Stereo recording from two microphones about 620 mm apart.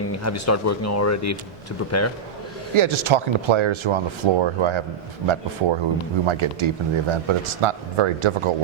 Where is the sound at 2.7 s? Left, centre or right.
Right.